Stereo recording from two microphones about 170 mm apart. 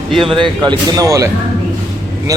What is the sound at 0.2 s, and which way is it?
A man's voice, 30° right (ahead or behind).